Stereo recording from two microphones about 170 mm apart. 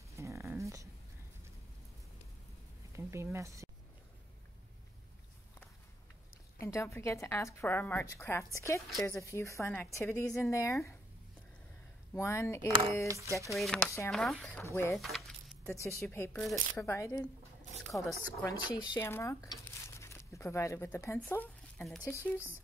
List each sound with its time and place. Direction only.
0.1 s dog: 15° right (ahead or behind)
2.9 s a sound: 15° right (ahead or behind)
3.3 s speech: 15° right (ahead or behind)
6.6 s a woman's voice: 15° left (ahead or behind)
12.1 s a woman's voice: 15° left (ahead or behind)
13.6 s speech: 5° left (ahead or behind)
13.8 s a woman's voice: 15° left (ahead or behind)
14.1 s speech: centre (ahead or behind)
14.6 s a woman's voice: 15° left (ahead or behind)
15.0 s keys jangling: centre (ahead or behind)
15.7 s a woman's voice: 15° left (ahead or behind); by 18.1 s centre (ahead or behind)
18.1 s a woman's voice: 20° left (ahead or behind)